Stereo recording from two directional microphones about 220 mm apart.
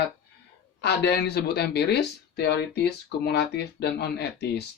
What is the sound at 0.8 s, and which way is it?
Speech, 50° left (ahead or behind).